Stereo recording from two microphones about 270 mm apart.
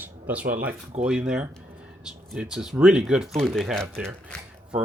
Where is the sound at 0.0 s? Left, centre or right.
Centre.